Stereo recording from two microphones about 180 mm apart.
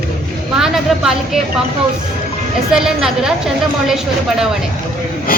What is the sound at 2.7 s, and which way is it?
Speech, 5° right (ahead or behind).